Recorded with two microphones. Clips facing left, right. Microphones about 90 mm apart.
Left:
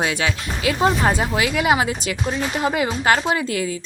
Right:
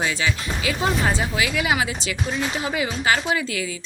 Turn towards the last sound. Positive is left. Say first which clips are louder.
# left 3 dB
turn(degrees=50)  # may be behind; listen again after turning